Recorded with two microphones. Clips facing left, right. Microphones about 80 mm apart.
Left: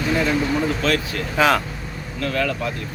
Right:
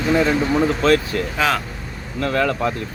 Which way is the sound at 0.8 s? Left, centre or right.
Right.